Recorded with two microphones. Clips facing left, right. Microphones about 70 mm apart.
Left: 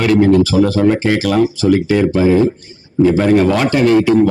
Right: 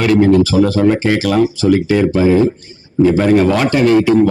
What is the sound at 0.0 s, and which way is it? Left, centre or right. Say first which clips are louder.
A man's voice: even; right.